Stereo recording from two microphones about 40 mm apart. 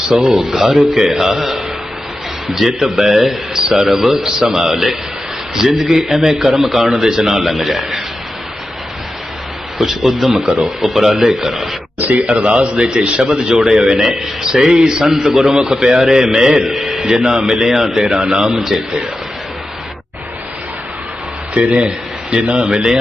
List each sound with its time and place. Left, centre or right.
0.3 s a man's voice: centre
7.3 s a man's voice: centre
9.7 s a man's voice: centre
11.9 s a sound: right
12.5 s a man's voice: right
16.6 s a man's voice: centre; by 18.4 s right
18.4 s a man's voice: centre
21.5 s speech: right